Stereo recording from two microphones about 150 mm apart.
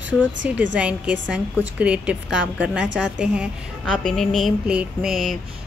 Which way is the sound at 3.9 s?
5° left (ahead or behind).